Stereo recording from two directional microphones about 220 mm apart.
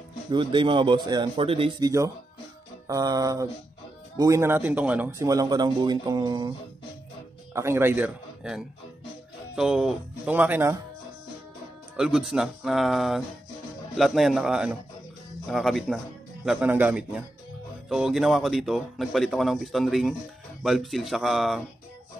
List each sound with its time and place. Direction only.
0.3 s speech: 20° right (ahead or behind)
7.5 s speech: 10° right (ahead or behind)
12.0 s speech: centre (ahead or behind)